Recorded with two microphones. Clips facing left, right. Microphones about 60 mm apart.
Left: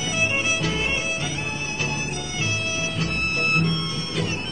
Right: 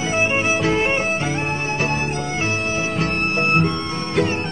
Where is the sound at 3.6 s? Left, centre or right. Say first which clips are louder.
Right 4 dB; right.